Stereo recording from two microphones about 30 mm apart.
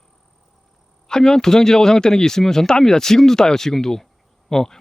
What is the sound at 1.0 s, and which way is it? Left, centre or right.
Speech, left.